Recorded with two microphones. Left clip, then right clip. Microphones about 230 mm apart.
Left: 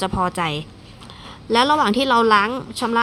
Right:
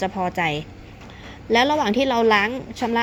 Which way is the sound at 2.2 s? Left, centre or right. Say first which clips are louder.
Left 1 dB; left.